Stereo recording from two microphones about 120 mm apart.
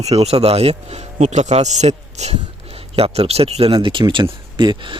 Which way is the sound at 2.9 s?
55° right (ahead or behind).